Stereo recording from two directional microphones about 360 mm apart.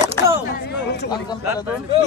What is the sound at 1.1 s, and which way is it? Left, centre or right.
Speech, centre.